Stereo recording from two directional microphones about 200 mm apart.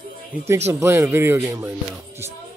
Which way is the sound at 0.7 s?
15° right (ahead or behind).